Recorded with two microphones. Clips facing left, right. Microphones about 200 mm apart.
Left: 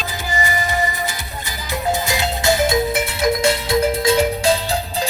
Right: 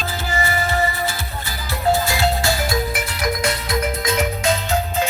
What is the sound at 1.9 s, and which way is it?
Music, 20° left (ahead or behind).